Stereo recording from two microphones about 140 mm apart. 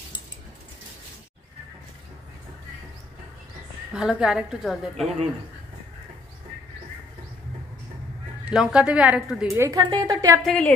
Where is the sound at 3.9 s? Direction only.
5° right (ahead or behind).